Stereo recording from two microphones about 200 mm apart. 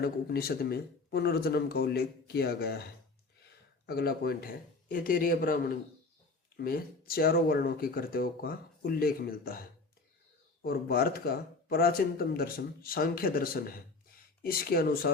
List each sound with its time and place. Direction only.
0.0 s speech: 50° left (ahead or behind)